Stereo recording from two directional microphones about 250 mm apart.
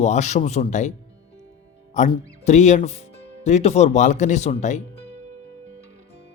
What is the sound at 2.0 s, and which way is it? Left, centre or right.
Speech, left.